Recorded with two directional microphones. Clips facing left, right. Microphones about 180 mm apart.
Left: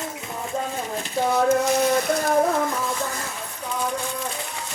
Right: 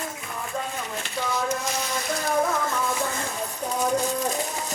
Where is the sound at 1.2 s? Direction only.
55° left (ahead or behind).